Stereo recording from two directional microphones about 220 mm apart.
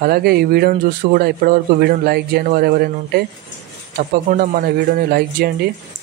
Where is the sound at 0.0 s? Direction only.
45° right (ahead or behind).